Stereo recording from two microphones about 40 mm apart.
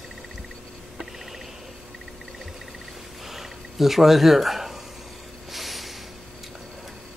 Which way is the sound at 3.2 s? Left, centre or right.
Centre.